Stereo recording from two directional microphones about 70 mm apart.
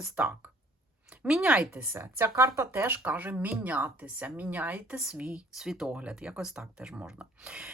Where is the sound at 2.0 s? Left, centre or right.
Right.